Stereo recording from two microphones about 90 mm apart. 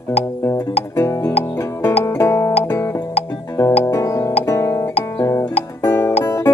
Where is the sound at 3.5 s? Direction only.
35° left (ahead or behind).